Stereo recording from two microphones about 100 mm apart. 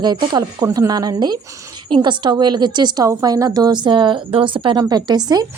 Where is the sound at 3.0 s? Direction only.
35° right (ahead or behind); by 4.7 s 55° right (ahead or behind).